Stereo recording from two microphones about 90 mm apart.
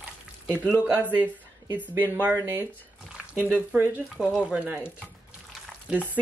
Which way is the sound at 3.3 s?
15° right (ahead or behind).